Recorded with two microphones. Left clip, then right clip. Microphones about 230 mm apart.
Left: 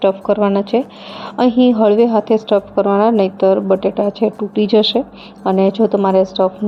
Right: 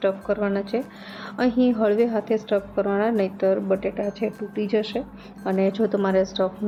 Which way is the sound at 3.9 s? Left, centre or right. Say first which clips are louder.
Left 10 dB; left.